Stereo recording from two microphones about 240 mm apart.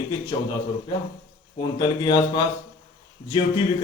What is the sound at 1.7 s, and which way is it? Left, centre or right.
Speech, centre.